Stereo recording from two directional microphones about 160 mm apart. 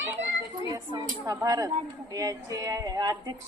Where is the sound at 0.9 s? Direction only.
20° right (ahead or behind).